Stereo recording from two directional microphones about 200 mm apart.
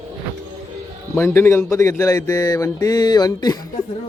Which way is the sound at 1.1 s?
10° left (ahead or behind).